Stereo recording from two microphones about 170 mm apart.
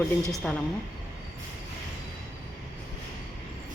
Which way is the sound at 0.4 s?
5° left (ahead or behind).